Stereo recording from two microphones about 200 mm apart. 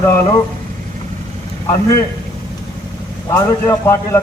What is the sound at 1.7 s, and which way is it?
Speech, 15° left (ahead or behind).